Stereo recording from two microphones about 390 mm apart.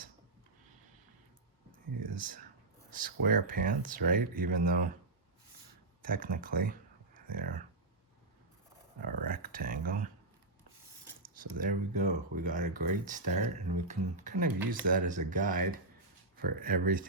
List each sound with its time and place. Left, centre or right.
1.9 s a sound: right
2.1 s speech: right
6.1 s speech: right
9.0 s speech: right
11.5 s speech: centre